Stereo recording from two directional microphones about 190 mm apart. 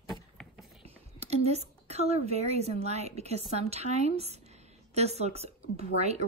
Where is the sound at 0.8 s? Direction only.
35° right (ahead or behind).